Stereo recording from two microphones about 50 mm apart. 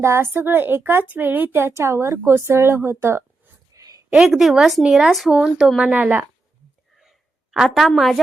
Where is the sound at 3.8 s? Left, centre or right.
Right.